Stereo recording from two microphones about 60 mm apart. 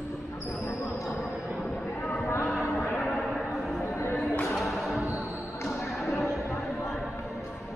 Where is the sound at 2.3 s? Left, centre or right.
Left.